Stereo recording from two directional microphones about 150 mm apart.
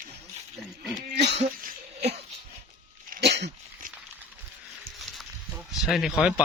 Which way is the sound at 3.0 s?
90° right.